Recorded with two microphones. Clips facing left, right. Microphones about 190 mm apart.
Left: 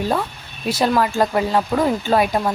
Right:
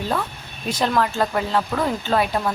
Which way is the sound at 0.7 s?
10° left (ahead or behind).